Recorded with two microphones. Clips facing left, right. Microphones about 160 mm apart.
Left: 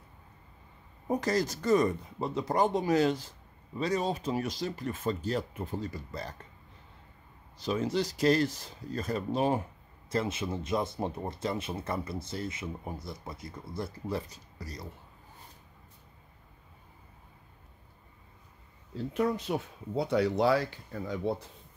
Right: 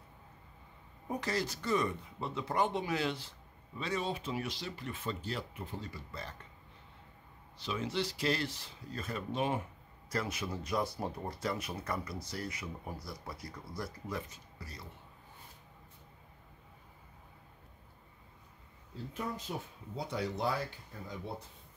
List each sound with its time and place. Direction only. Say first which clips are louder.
1.0 s speech: left 7 dB; 40° left (ahead or behind)
7.5 s speech: left 6 dB; 40° left (ahead or behind)
10.0 s speech: left 5 dB; 25° left (ahead or behind)
18.9 s speech: left 10 dB; 75° left (ahead or behind)